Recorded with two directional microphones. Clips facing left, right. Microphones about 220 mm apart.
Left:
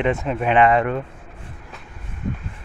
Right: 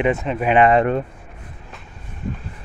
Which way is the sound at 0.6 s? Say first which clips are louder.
Right 2 dB; 30° right (ahead or behind).